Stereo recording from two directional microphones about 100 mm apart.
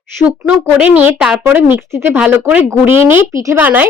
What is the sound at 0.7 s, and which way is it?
A woman's voice, 15° right (ahead or behind).